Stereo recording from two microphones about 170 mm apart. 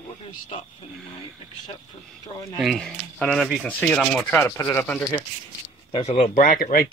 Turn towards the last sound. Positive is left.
turn(degrees=55)  # may be behind; listen again after turning